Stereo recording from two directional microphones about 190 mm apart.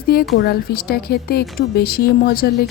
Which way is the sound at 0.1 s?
55° left (ahead or behind).